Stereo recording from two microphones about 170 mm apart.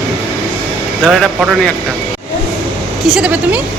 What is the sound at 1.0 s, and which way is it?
Speech, centre (ahead or behind).